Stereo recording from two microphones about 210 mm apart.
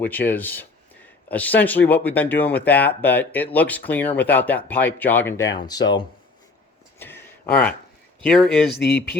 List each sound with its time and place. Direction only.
0.0 s speech: 10° left (ahead or behind)
7.0 s a sound: 10° left (ahead or behind)
8.2 s speech: 5° left (ahead or behind)
8.7 s speech: 50° left (ahead or behind)